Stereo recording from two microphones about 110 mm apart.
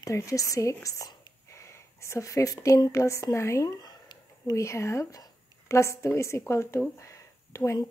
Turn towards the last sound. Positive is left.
turn(degrees=30)  # may be behind; listen again after turning